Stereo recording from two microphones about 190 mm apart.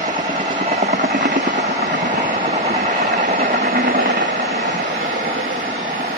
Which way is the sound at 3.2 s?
50° right (ahead or behind).